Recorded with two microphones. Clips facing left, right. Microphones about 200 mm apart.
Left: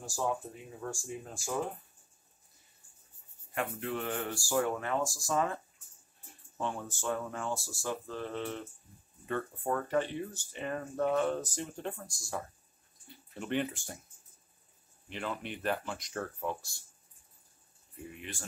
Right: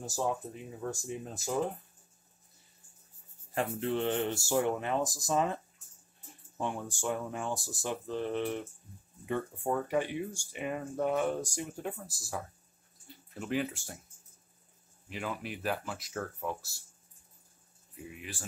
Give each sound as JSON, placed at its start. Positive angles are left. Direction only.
{"t": 0.7, "sound": "speech", "side_deg": -20}
{"t": 3.5, "sound": "speech", "side_deg": -30}
{"t": 6.6, "sound": "speech", "side_deg": -15}
{"t": 15.0, "sound": "speech", "side_deg": -5}
{"t": 17.9, "sound": "speech", "side_deg": -5}